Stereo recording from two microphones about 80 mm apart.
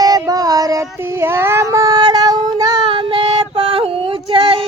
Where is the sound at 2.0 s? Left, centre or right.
Right.